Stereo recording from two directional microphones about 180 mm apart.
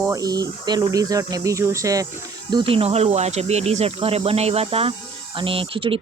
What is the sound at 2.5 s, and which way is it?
Speech, 30° right (ahead or behind).